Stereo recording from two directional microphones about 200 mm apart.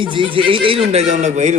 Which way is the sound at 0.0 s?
25° right (ahead or behind).